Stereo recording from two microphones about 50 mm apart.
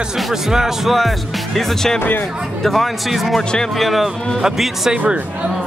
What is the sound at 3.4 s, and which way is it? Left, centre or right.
Speech, centre.